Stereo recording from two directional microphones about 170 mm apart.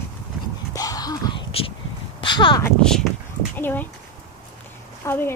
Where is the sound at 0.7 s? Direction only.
20° left (ahead or behind).